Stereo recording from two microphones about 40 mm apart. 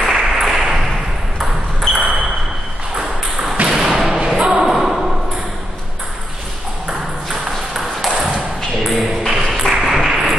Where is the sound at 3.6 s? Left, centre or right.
Centre.